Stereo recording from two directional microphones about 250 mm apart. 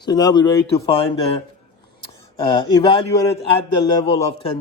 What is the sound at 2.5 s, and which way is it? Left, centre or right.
A man's voice, centre.